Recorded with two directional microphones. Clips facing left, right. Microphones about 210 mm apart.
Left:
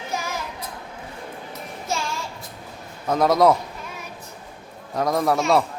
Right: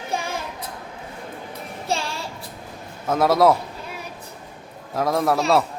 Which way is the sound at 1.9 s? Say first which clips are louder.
Right 2 dB; 30° right (ahead or behind).